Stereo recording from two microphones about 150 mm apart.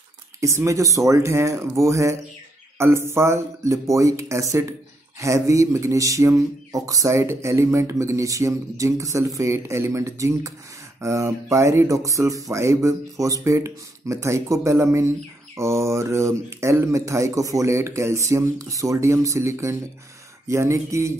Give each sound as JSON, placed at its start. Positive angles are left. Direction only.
{"t": 0.4, "sound": "speech", "side_deg": -20}